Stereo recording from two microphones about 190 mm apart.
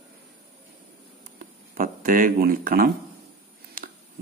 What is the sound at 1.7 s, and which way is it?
Speech, 45° right (ahead or behind).